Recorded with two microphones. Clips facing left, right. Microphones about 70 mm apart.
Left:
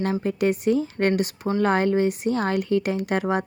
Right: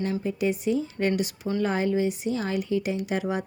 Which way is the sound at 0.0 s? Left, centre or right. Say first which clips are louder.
Left 4 dB; left.